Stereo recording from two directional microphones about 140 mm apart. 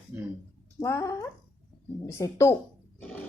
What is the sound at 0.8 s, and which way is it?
A woman's voice, 20° left (ahead or behind).